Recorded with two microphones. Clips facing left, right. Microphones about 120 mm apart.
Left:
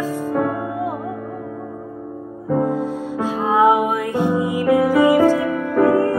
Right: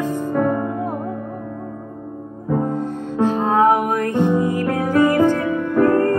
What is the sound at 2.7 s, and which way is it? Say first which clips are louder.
Music: left 1 dB; 10° left (ahead or behind).